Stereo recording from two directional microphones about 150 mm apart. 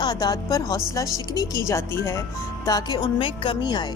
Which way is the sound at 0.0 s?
25° left (ahead or behind).